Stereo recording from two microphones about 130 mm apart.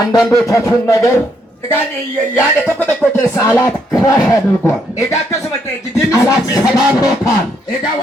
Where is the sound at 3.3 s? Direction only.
25° left (ahead or behind).